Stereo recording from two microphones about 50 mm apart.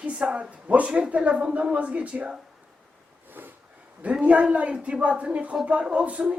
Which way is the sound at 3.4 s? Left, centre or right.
Right.